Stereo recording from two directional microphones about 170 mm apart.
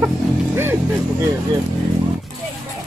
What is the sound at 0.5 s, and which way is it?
Speech, 15° right (ahead or behind).